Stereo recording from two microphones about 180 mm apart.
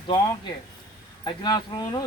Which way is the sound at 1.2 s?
25° left (ahead or behind).